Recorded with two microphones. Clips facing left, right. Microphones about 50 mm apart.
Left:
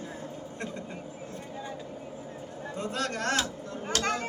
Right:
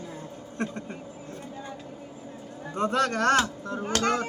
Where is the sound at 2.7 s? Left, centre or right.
Right.